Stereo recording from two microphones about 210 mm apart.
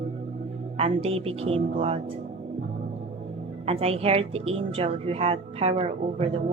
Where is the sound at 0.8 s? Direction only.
30° right (ahead or behind).